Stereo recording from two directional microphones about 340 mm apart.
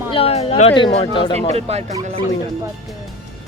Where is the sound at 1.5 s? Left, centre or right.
Centre.